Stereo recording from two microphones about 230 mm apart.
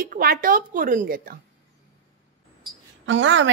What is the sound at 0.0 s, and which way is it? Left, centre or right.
A woman's voice, right.